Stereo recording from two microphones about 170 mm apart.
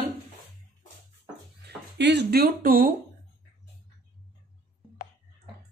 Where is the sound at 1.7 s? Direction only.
85° right; by 2.9 s 60° right (ahead or behind).